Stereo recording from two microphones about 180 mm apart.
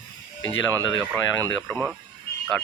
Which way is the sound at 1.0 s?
15° right (ahead or behind).